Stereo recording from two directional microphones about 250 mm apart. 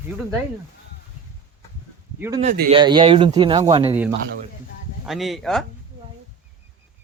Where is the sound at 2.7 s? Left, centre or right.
Centre.